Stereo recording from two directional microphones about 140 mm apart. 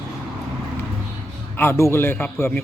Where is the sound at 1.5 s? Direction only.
15° left (ahead or behind).